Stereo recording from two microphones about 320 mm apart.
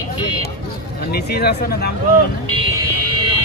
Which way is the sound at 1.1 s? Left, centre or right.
Left.